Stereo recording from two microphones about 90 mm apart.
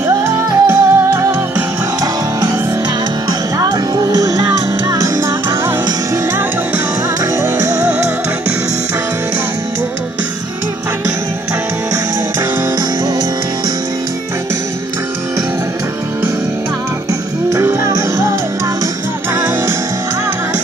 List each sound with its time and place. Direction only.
0.2 s music: 30° right (ahead or behind)
3.3 s music: 45° right (ahead or behind)
7.4 s music: 30° right (ahead or behind)
17.5 s music: 35° right (ahead or behind)
19.3 s music: 30° right (ahead or behind)